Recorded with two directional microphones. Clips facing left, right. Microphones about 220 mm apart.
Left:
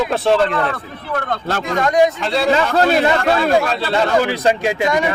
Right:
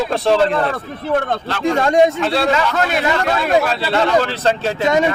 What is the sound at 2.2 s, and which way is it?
Speech, centre (ahead or behind).